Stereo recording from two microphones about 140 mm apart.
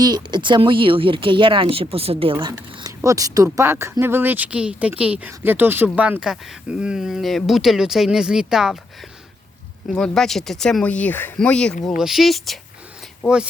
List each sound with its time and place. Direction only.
0.0 s speech: 30° right (ahead or behind); by 12.5 s centre (ahead or behind)
13.2 s speech: 15° left (ahead or behind)